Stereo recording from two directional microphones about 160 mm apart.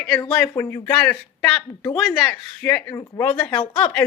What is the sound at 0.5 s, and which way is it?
Speech, 15° left (ahead or behind).